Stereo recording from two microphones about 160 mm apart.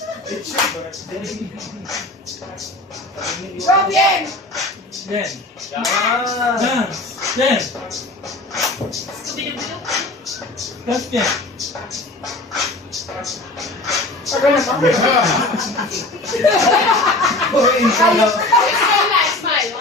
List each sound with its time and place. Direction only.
0.3 s slap: centre (ahead or behind)
3.6 s speech: centre (ahead or behind)
8.5 s a sound: centre (ahead or behind)
9.3 s speech: centre (ahead or behind)
11.9 s a sound: centre (ahead or behind)
15.8 s a child's voice: centre (ahead or behind)